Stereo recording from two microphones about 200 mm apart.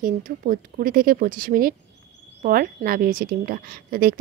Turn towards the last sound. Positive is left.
turn(degrees=-45)  # may be behind; listen again after turning